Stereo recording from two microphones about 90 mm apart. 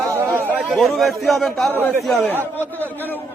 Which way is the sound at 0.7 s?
Centre (ahead or behind).